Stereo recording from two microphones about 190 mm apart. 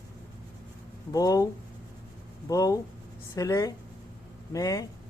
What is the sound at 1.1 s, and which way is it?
Speech, 20° left (ahead or behind).